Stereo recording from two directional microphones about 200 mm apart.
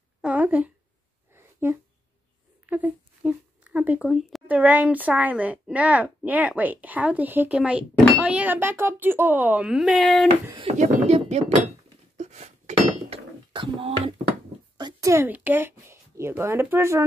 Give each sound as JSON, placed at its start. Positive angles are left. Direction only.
{"t": 0.2, "sound": "a sound", "side_deg": -5}
{"t": 2.7, "sound": "speech", "side_deg": -5}
{"t": 10.5, "sound": "speech", "side_deg": -30}
{"t": 12.2, "sound": "dishes", "side_deg": -35}
{"t": 14.8, "sound": "speech", "side_deg": -20}